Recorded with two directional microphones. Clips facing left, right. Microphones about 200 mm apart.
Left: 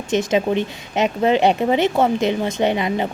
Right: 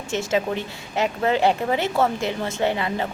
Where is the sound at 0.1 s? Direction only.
20° left (ahead or behind).